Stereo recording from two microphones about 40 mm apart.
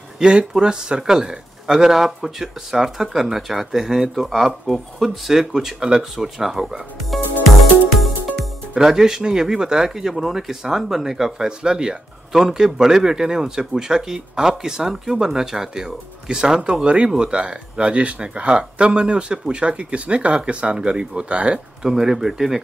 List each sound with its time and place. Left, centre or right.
0.2 s speech: right
4.1 s speech: centre
8.8 s speech: centre
12.3 s speech: centre
16.8 s speech: right
21.8 s speech: centre